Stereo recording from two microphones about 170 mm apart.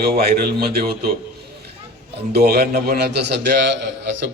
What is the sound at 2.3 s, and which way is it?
A man's voice, 65° right (ahead or behind).